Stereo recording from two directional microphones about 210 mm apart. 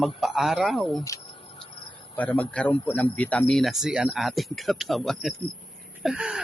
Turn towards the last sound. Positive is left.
turn(degrees=-5)  # may be behind; listen again after turning